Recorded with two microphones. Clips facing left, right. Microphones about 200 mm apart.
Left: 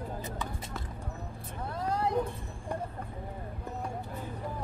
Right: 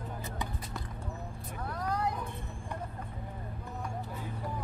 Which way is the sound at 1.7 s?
25° left (ahead or behind).